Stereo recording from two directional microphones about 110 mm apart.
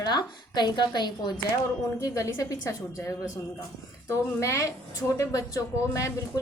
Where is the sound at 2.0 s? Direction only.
30° left (ahead or behind).